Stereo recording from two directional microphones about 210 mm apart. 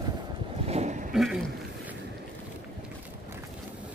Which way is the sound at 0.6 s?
30° right (ahead or behind).